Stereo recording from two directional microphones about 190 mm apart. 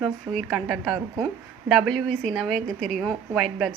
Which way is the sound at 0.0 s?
Centre (ahead or behind).